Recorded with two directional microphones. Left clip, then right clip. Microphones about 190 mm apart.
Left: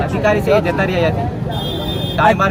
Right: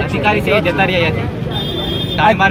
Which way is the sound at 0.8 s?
15° left (ahead or behind).